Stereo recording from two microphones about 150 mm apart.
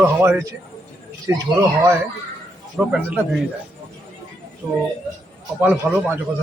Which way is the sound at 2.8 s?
Centre (ahead or behind).